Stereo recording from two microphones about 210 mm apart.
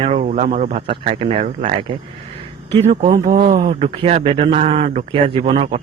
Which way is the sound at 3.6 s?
25° right (ahead or behind).